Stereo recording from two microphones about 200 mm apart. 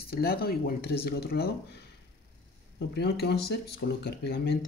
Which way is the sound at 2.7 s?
55° left (ahead or behind).